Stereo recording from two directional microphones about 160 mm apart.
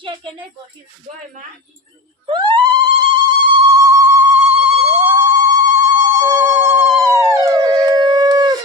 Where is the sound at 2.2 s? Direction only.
30° right (ahead or behind).